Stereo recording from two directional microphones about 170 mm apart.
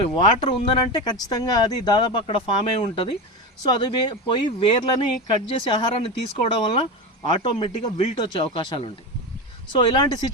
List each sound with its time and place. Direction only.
0.0 s speech: 35° left (ahead or behind)